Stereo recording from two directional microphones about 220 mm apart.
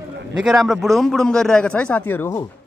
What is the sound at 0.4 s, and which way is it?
A man's voice, centre (ahead or behind).